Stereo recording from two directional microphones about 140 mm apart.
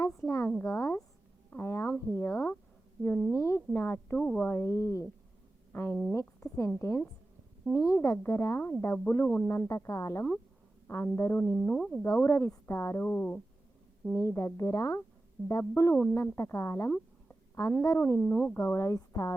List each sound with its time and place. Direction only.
0.0 s a sound: 20° left (ahead or behind)
2.0 s a woman's voice: 20° left (ahead or behind)
11.5 s speech: 5° left (ahead or behind)
12.0 s a woman's voice: 15° left (ahead or behind)
18.2 s a woman's voice: 5° left (ahead or behind)
18.6 s speech: 20° left (ahead or behind)